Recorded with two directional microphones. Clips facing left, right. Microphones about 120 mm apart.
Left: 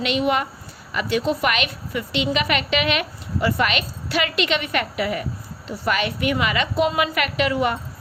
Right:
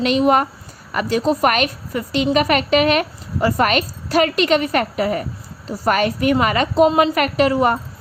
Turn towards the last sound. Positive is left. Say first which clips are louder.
# right 5 dB
turn(degrees=-40)  # may be behind; listen again after turning